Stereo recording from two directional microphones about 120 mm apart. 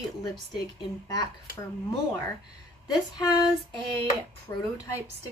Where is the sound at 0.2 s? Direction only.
30° left (ahead or behind).